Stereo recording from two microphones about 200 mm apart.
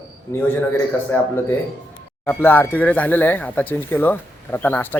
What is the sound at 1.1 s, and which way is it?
Speech, 10° left (ahead or behind).